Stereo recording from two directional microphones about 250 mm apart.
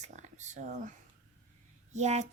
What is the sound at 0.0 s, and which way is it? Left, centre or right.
A woman's voice, right.